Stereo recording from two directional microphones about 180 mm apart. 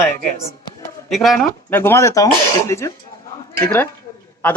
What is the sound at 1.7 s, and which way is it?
A woman's voice, 10° left (ahead or behind).